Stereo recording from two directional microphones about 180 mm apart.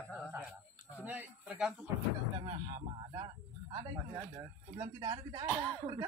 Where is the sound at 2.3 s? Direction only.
25° right (ahead or behind).